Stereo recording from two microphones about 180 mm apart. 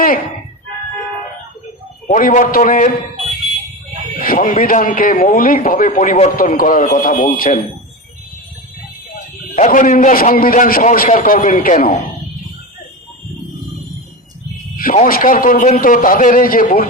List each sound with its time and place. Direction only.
2.0 s a man's voice: 45° left (ahead or behind)
4.2 s a man's voice: 50° left (ahead or behind)
9.6 s a man's voice: 45° left (ahead or behind)
14.9 s a man's voice: 50° left (ahead or behind)